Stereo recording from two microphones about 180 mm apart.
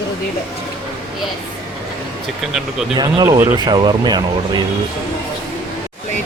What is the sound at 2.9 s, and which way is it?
Speech, 25° right (ahead or behind).